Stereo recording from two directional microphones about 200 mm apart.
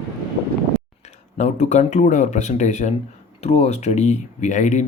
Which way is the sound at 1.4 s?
35° left (ahead or behind).